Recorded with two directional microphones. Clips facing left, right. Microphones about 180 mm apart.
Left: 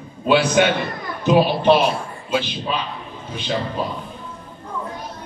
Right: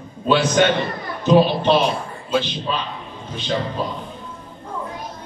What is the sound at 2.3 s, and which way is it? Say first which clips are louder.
Speech: right 1 dB; 10° left (ahead or behind).